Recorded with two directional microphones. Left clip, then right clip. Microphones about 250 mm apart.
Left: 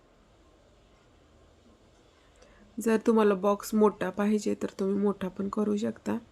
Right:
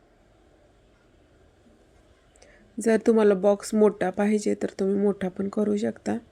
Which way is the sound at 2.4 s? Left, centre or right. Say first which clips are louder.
Right 5 dB; centre.